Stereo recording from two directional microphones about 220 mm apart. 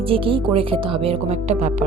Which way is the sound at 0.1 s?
25° right (ahead or behind).